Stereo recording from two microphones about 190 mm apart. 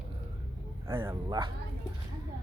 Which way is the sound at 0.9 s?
10° right (ahead or behind).